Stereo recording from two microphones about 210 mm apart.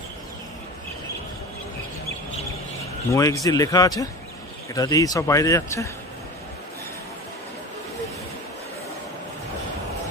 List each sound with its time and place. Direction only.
3.1 s speech: 15° left (ahead or behind)